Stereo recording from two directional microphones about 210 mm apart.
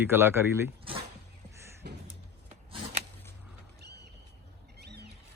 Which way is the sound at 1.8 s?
50° right (ahead or behind).